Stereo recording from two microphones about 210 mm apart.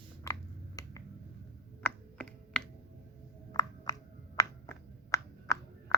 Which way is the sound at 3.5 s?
15° left (ahead or behind).